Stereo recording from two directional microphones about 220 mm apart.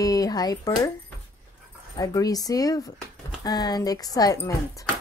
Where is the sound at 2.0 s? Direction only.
15° left (ahead or behind).